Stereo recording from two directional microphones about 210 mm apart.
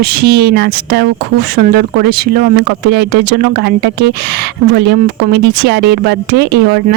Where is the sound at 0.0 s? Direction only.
50° right (ahead or behind).